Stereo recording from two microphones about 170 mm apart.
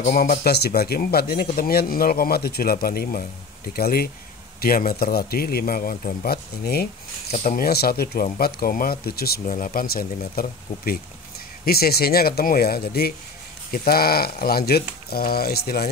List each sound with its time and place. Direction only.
0.0 s speech: 55° left (ahead or behind)
9.5 s speech: 55° left (ahead or behind)